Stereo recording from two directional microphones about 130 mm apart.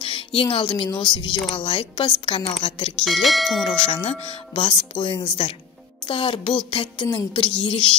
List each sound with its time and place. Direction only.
0.0 s a woman's voice: 45° left (ahead or behind)
0.8 s music: 35° left (ahead or behind)
1.5 s speech: 45° left (ahead or behind)
3.1 s speech: centre (ahead or behind)
3.6 s speech: 45° left (ahead or behind)
6.0 s music: 40° left (ahead or behind)